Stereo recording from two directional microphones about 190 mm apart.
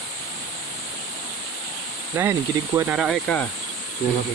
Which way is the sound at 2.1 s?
10° right (ahead or behind).